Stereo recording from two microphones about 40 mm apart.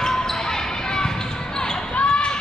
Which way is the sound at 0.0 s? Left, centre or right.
Centre.